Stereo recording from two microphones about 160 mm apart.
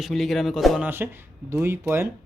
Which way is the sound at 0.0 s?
Centre (ahead or behind).